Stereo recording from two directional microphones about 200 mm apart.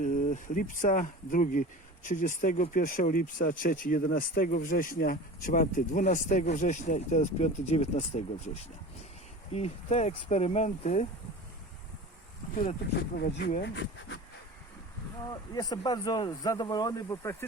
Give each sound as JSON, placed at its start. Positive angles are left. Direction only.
{"t": 0.0, "sound": "speech", "side_deg": 40}
{"t": 9.5, "sound": "speech", "side_deg": 30}
{"t": 13.1, "sound": "speech", "side_deg": 55}
{"t": 15.3, "sound": "speech", "side_deg": 20}